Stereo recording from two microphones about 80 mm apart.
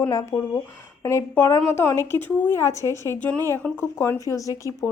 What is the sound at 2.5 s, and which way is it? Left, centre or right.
Speech, left.